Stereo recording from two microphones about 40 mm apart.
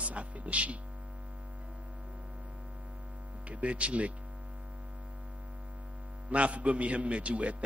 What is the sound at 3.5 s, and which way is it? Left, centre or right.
Speech, right.